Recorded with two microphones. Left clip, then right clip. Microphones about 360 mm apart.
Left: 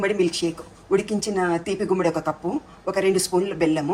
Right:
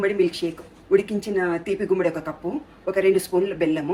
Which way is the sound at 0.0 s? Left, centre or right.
Centre.